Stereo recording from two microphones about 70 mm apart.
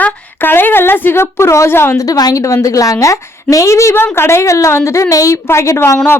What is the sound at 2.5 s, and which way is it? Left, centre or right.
A woman's voice, left.